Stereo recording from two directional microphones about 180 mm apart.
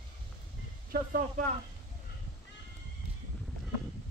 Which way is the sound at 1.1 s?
50° right (ahead or behind).